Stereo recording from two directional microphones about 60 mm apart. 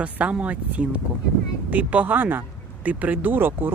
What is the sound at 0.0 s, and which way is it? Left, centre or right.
Speech, right.